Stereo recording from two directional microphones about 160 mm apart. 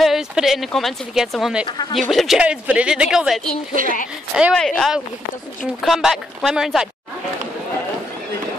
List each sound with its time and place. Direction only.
0.0 s speech: centre (ahead or behind)
1.7 s speech: 30° left (ahead or behind)
2.0 s speech: centre (ahead or behind)
3.8 s a woman's voice: 60° right (ahead or behind)
4.6 s speech: 5° left (ahead or behind)